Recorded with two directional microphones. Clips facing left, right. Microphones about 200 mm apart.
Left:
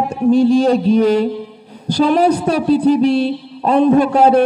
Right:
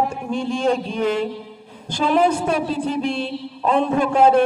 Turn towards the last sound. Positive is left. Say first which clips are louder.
# left 4 dB
turn(degrees=40)  # may be behind; listen again after turning